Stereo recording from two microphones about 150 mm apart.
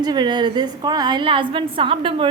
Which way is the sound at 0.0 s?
30° right (ahead or behind).